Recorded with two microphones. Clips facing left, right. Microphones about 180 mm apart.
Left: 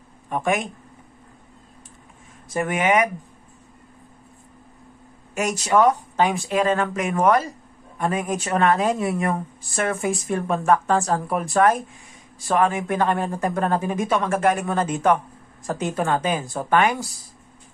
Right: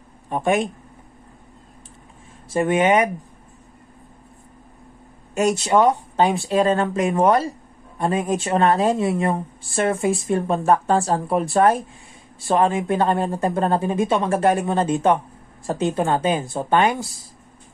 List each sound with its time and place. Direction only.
0.3 s speech: 30° right (ahead or behind)
2.5 s speech: 30° right (ahead or behind)
5.3 s speech: 35° right (ahead or behind)
5.7 s speech: 20° right (ahead or behind)
6.5 s speech: 35° right (ahead or behind)
8.5 s speech: 35° right (ahead or behind)
8.9 s speech: 20° right (ahead or behind)